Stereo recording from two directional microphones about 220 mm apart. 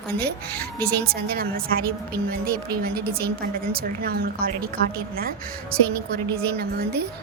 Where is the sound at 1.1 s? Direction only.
45° right (ahead or behind).